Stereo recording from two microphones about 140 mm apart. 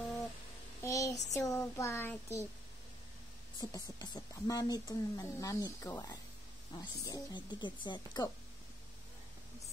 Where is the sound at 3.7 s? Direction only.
25° left (ahead or behind).